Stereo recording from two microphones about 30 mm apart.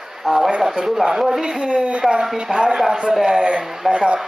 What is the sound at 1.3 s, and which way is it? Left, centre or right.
Speech, right.